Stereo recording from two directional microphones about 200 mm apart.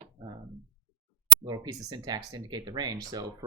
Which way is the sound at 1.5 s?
20° right (ahead or behind).